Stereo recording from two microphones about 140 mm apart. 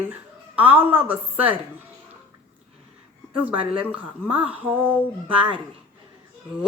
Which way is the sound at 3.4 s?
10° right (ahead or behind).